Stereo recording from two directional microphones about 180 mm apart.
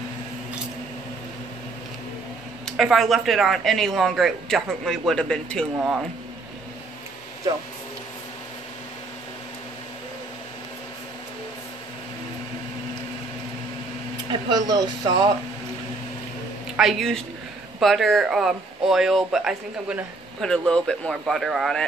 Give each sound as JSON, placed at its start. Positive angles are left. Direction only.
{"t": 2.6, "sound": "speech", "side_deg": 0}
{"t": 14.5, "sound": "speech", "side_deg": -20}
{"t": 16.7, "sound": "speech", "side_deg": 0}